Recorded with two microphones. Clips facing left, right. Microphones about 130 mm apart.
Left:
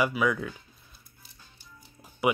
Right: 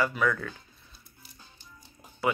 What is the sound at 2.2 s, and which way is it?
Speech, 15° left (ahead or behind).